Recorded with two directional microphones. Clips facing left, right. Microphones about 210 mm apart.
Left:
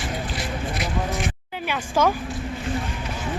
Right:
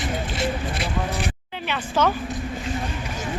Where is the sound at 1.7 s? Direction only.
10° left (ahead or behind).